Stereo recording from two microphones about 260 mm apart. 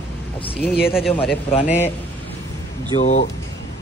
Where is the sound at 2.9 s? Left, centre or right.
Left.